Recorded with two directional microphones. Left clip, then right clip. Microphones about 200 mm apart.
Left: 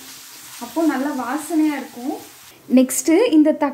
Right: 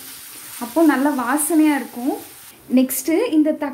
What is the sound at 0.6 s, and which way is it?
Stir, 65° right (ahead or behind).